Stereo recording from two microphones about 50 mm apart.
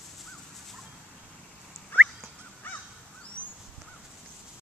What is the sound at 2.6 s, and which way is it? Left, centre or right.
Crow, left.